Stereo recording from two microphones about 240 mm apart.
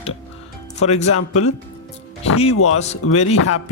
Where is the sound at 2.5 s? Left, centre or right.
Left.